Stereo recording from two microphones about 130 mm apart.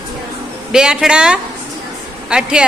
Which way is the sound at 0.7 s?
5° right (ahead or behind).